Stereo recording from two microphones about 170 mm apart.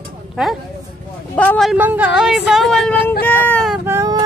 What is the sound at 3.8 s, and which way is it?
Child singing, 15° right (ahead or behind).